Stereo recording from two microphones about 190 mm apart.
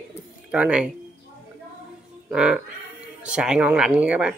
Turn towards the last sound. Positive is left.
turn(degrees=-5)  # may be behind; listen again after turning